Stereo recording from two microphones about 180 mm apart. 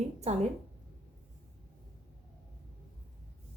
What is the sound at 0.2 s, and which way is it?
Speech, 40° right (ahead or behind).